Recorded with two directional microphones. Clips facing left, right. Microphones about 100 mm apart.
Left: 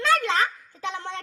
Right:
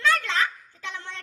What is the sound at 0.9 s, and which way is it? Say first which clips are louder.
Speech: left 6 dB; 25° left (ahead or behind).